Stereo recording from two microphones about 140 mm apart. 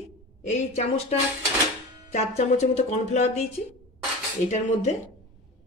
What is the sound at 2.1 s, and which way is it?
Speech, 55° left (ahead or behind).